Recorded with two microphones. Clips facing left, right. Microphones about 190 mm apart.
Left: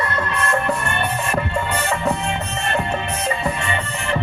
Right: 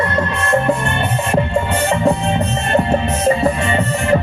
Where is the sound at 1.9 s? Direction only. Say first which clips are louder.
Right 8 dB; 30° right (ahead or behind).